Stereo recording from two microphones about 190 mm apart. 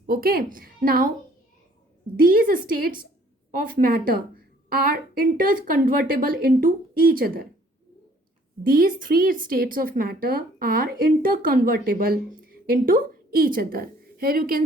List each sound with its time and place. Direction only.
0.0 s a woman's voice: 50° right (ahead or behind)
2.2 s a woman's voice: 50° right (ahead or behind)
8.6 s a woman's voice: 50° right (ahead or behind)